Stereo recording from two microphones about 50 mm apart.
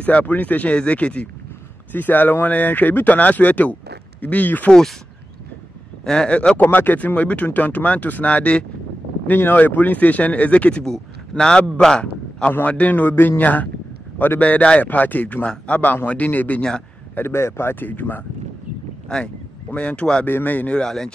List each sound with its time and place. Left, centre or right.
0.0 s speech: left
1.9 s speech: left
6.0 s speech: centre
6.6 s speech: left
9.3 s speech: left
9.6 s speech: left
10.8 s a man's voice: centre; by 16.6 s left
17.3 s speech: left
19.0 s speech: centre
20.2 s speech: left
20.7 s speech: centre